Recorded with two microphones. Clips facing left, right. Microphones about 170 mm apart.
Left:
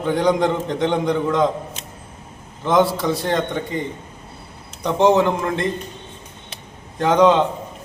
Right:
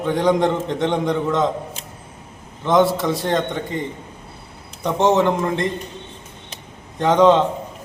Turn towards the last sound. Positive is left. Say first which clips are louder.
# right 1 dB
turn(degrees=0)  # may be behind; listen again after turning